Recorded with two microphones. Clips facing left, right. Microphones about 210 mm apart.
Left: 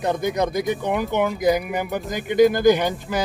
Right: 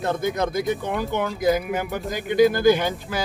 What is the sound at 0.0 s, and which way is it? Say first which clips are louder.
Speech: left 2 dB; 15° left (ahead or behind).